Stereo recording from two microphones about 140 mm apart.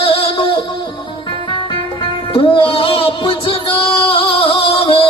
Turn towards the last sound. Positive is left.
turn(degrees=40)  # may be behind; listen again after turning